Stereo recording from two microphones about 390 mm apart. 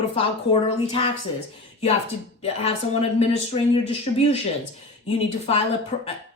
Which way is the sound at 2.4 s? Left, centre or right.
Centre.